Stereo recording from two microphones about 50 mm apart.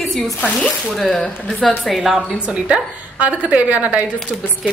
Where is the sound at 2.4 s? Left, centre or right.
Right.